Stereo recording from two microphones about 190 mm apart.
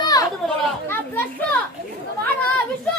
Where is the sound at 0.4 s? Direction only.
10° left (ahead or behind).